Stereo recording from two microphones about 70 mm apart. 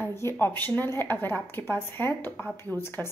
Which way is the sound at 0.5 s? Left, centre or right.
Left.